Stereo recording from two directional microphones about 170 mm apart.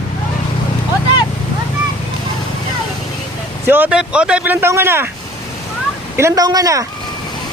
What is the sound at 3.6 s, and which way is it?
Speech, 10° right (ahead or behind).